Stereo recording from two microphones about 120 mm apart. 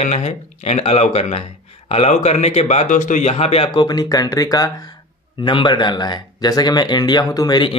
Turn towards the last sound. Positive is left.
turn(degrees=35)  # may be behind; listen again after turning